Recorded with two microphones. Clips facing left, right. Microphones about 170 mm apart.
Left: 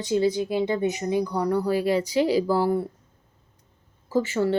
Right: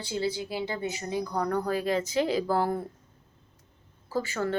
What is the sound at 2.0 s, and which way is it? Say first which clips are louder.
Speech: left 5 dB; 50° right (ahead or behind).